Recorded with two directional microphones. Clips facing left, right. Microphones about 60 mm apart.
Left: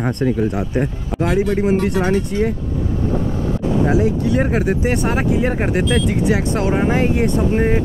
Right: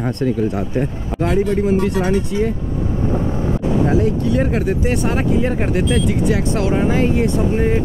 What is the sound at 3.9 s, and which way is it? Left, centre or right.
Speech, centre.